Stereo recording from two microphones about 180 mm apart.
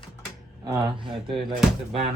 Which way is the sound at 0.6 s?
25° right (ahead or behind).